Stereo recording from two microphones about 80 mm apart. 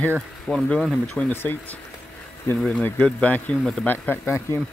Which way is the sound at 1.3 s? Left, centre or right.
Left.